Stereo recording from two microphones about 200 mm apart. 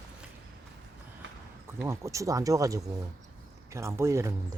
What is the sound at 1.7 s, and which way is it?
Speech, 10° right (ahead or behind).